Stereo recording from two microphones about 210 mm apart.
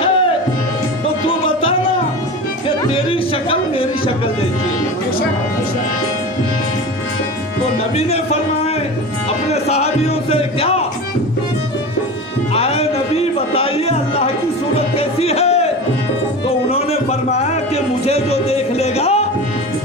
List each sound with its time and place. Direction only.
2.8 s music: 25° left (ahead or behind)
9.5 s speech: 30° left (ahead or behind)
12.5 s a sound: 30° left (ahead or behind)
15.0 s music: 30° left (ahead or behind)